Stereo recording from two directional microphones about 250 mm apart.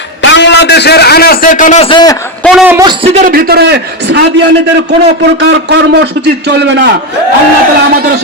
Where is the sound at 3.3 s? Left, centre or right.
Right.